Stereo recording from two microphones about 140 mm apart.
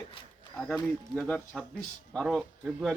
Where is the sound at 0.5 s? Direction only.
5° left (ahead or behind).